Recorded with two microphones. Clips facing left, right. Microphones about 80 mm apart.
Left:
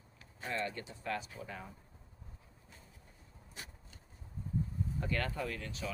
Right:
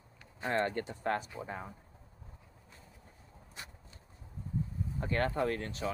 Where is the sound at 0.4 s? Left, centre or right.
Right.